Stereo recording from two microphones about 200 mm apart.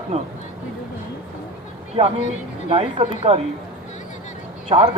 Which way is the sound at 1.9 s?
30° right (ahead or behind).